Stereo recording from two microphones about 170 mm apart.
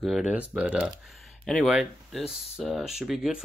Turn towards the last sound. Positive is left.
turn(degrees=-5)  # may be behind; listen again after turning